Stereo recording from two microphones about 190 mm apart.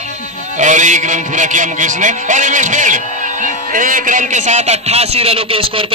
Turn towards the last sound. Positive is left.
turn(degrees=-30)  # may be behind; listen again after turning